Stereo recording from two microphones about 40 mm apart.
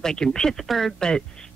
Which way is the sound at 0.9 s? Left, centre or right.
Centre.